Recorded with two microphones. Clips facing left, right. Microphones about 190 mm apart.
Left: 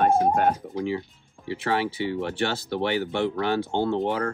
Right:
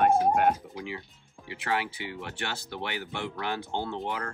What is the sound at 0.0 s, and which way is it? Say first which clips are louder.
Speech: left 2 dB; 30° left (ahead or behind).